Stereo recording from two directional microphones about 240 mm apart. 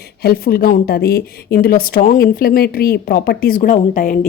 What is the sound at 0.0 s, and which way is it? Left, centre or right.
Speech, left.